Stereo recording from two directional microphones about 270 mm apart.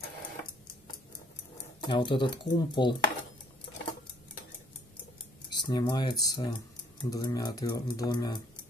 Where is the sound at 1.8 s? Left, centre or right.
Centre.